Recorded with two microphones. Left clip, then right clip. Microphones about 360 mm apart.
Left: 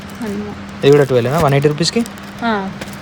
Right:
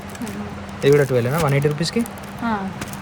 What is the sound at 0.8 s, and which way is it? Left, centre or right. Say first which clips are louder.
Speech: left 5 dB; centre.